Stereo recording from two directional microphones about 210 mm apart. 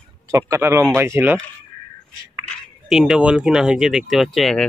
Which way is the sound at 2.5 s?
Centre (ahead or behind).